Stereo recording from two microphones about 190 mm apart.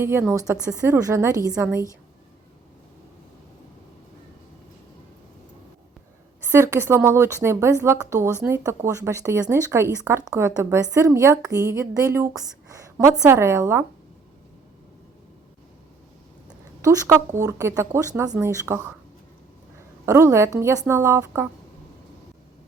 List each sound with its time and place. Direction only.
0.0 s a woman's voice: 10° right (ahead or behind)
6.4 s a woman's voice: 15° right (ahead or behind)
16.8 s a woman's voice: 15° right (ahead or behind)
20.1 s a woman's voice: 15° right (ahead or behind)